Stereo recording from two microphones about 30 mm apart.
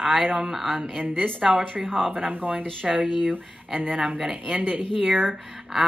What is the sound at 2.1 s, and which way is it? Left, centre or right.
Speech, right.